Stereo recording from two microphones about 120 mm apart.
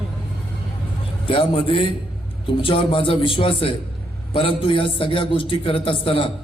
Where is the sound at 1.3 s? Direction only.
50° left (ahead or behind).